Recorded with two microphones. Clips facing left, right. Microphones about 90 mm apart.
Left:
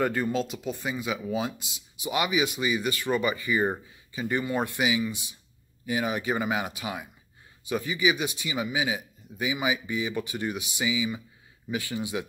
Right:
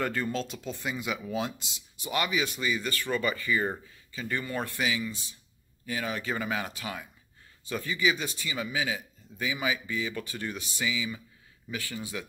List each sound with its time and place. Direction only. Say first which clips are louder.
0.0 s speech: left 4 dB; 10° left (ahead or behind)